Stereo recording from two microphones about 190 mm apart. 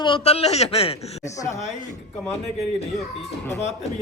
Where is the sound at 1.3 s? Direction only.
15° left (ahead or behind).